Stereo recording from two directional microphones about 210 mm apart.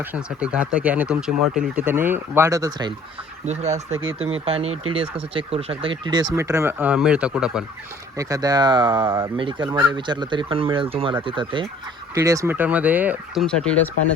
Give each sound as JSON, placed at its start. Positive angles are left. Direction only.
{"t": 0.1, "sound": "speech", "side_deg": -5}
{"t": 3.4, "sound": "speech", "side_deg": -30}
{"t": 8.2, "sound": "speech", "side_deg": -15}
{"t": 9.4, "sound": "speech", "side_deg": -25}